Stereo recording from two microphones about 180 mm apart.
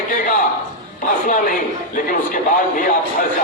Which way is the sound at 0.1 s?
45° left (ahead or behind).